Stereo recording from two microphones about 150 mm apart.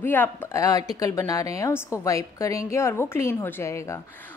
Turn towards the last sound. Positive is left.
turn(degrees=20)  # may be behind; listen again after turning